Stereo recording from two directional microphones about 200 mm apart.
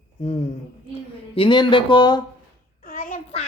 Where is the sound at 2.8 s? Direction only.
45° left (ahead or behind).